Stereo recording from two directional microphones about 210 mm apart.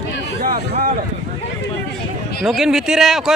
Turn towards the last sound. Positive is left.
turn(degrees=0)  # may be behind; listen again after turning